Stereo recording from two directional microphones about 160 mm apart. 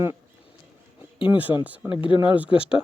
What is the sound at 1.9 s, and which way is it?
Speech, 30° left (ahead or behind).